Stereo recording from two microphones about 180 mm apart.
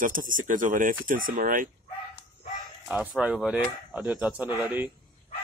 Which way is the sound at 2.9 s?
5° right (ahead or behind).